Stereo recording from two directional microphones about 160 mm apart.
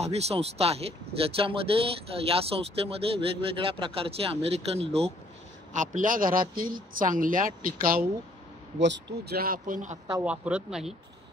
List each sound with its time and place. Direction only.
0.0 s speech: 40° right (ahead or behind)
5.7 s speech: 50° right (ahead or behind)
8.8 s speech: 90° right; by 9.9 s 55° right (ahead or behind)
10.2 s speech: 5° right (ahead or behind)